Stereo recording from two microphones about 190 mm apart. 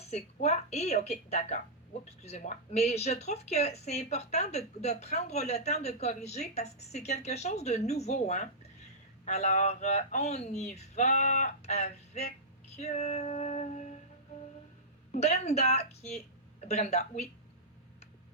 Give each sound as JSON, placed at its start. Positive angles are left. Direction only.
{"t": 0.1, "sound": "speech", "side_deg": 35}
{"t": 12.7, "sound": "female singing", "side_deg": 35}
{"t": 15.1, "sound": "speech", "side_deg": 35}